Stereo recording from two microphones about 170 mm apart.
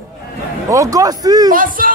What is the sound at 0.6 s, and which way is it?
Speech, 20° right (ahead or behind).